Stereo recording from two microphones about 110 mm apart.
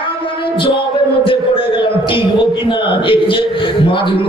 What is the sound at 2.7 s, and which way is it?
Speech, 55° left (ahead or behind).